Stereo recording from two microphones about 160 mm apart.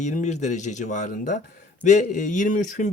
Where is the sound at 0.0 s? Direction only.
50° left (ahead or behind).